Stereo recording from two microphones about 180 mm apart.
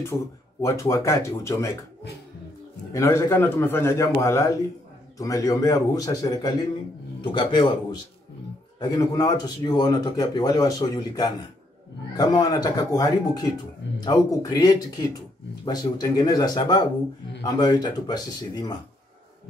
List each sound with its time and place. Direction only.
0.1 s speech: centre (ahead or behind)
0.6 s a man's voice: 15° left (ahead or behind)
2.9 s a man's voice: 15° left (ahead or behind)